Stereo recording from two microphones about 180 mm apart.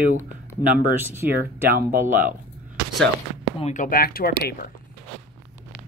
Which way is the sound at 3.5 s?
40° left (ahead or behind).